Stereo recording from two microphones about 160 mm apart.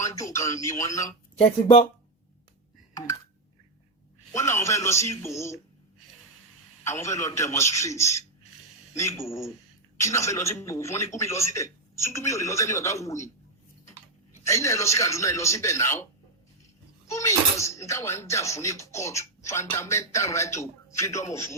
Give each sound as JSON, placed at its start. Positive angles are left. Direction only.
{"t": 0.0, "sound": "a man's voice", "side_deg": 20}
{"t": 4.3, "sound": "speech", "side_deg": 15}
{"t": 6.8, "sound": "a man's voice", "side_deg": 15}
{"t": 14.4, "sound": "a man's voice", "side_deg": 20}
{"t": 17.1, "sound": "speech", "side_deg": 20}